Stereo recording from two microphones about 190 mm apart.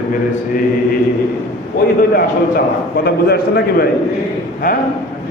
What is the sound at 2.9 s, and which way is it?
Speech, 55° left (ahead or behind).